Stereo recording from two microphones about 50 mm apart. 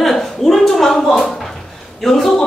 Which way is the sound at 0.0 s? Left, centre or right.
Centre.